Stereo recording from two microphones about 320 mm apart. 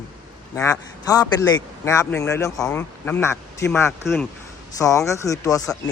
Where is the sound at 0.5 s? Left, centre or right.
Centre.